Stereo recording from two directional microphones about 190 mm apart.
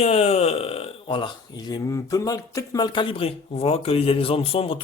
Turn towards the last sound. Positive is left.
turn(degrees=30)  # may be behind; listen again after turning